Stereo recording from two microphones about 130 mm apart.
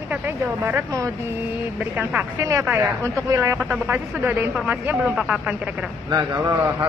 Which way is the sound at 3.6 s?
10° right (ahead or behind).